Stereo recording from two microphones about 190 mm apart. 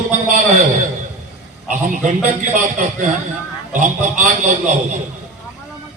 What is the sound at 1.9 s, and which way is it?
A man's voice, 40° right (ahead or behind).